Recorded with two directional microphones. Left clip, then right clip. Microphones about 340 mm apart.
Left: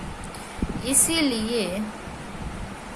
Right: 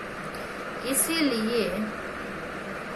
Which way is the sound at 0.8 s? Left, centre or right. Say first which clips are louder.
Left 3 dB; left.